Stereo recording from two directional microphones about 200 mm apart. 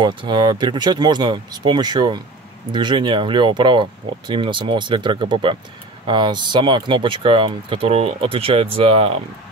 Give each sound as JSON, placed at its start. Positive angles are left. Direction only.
{"t": 0.0, "sound": "speech", "side_deg": -25}